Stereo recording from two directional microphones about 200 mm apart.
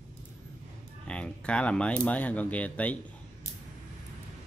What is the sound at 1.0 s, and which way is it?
Speech, 5° left (ahead or behind).